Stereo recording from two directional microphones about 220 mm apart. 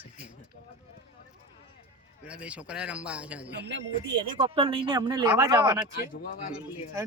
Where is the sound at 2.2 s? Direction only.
5° right (ahead or behind).